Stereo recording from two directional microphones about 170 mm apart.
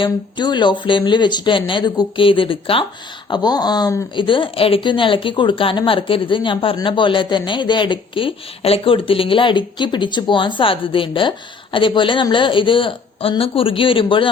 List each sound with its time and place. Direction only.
0.0 s a woman's voice: 25° left (ahead or behind)